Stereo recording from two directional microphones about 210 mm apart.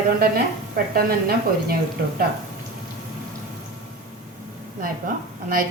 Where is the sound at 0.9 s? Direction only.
45° right (ahead or behind).